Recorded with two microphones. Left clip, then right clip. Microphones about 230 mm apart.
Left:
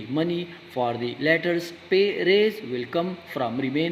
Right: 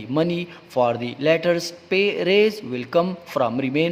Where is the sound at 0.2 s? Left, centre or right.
Right.